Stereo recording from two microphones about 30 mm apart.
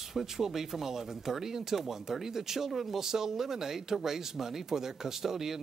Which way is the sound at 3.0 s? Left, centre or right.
Centre.